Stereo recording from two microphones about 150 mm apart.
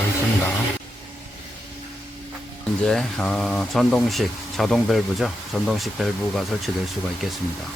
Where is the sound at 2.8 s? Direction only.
5° left (ahead or behind).